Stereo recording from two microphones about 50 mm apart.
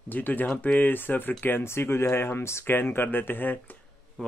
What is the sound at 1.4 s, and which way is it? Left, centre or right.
Speech, left.